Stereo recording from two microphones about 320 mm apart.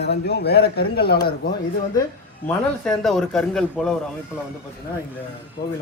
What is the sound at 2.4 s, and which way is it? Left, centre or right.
Speech, centre.